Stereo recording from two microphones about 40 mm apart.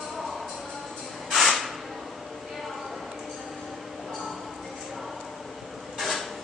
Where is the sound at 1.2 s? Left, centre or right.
Centre.